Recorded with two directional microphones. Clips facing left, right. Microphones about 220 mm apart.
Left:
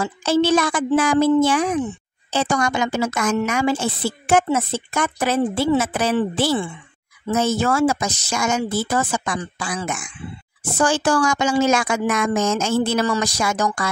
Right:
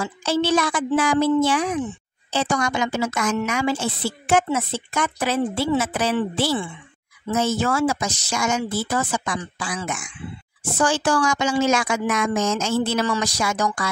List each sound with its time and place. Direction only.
0.0 s a woman's voice: 45° left (ahead or behind)